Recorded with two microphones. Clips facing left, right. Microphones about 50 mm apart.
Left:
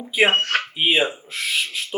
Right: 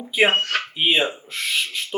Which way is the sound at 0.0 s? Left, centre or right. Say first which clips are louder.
Even; centre.